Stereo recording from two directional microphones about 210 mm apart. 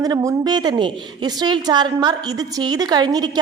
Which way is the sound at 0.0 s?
15° right (ahead or behind).